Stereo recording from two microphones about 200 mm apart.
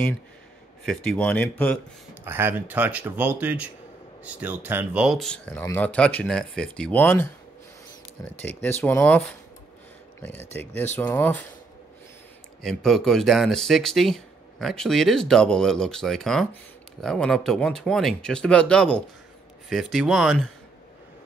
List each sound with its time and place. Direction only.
0.8 s speech: 5° left (ahead or behind)
2.2 s speech: 10° right (ahead or behind); by 7.2 s 10° left (ahead or behind)
8.4 s speech: 10° left (ahead or behind)
10.2 s speech: 10° left (ahead or behind)
12.6 s speech: centre (ahead or behind)